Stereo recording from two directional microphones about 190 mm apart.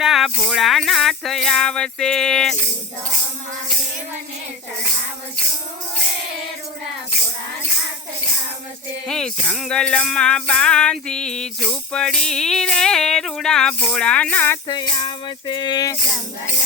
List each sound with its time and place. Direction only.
0.0 s music: centre (ahead or behind)
9.0 s music: 5° left (ahead or behind)
14.7 s music: 25° left (ahead or behind)